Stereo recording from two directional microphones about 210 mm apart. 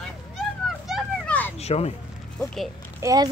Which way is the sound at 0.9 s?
5° left (ahead or behind).